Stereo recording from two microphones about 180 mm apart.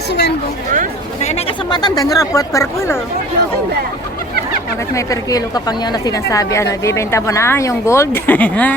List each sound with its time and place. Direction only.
0.1 s a sound: 65° left (ahead or behind)
1.2 s speech: 35° left (ahead or behind); by 3.0 s 15° left (ahead or behind)
4.9 s a woman's voice: 20° left (ahead or behind)